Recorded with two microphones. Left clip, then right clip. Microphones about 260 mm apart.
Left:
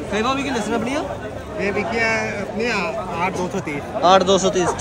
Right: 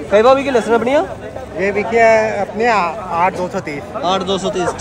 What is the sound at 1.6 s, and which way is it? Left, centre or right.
Speech, centre.